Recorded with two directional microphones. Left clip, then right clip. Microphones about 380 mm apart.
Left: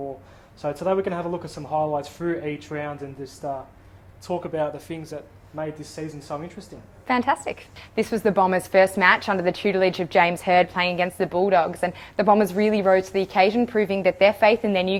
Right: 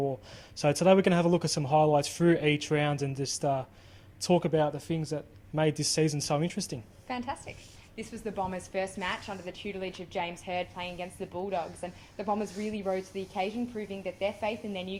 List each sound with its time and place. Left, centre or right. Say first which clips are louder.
0.6 s speech: even; right
5.5 s speech: right 4 dB; right
7.1 s a woman's voice: left 14 dB; left
8.4 s a woman's voice: left 15 dB; left